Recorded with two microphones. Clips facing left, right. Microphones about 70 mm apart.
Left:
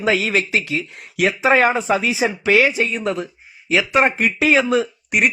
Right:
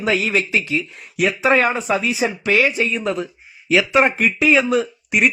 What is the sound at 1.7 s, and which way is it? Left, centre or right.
Speech, centre.